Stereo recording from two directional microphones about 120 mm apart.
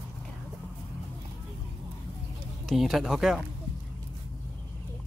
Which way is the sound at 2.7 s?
Centre (ahead or behind).